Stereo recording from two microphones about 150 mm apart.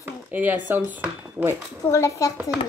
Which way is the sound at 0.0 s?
10° right (ahead or behind).